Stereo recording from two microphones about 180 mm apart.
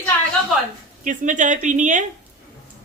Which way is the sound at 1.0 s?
45° right (ahead or behind).